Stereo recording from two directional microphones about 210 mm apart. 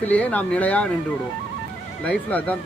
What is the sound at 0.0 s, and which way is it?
Speech, 5° left (ahead or behind).